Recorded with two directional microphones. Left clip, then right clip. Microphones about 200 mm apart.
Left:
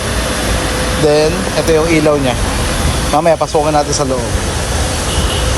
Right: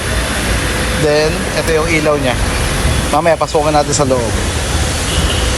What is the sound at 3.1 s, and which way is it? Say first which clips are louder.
Speech: left 1 dB; 10° left (ahead or behind).